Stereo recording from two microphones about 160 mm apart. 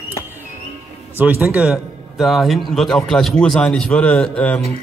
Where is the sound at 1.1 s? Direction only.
10° right (ahead or behind).